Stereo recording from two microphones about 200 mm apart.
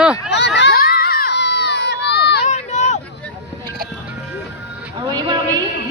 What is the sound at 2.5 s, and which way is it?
Run, 35° left (ahead or behind).